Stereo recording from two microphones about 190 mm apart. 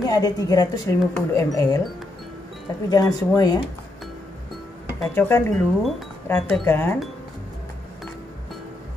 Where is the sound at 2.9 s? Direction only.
20° left (ahead or behind).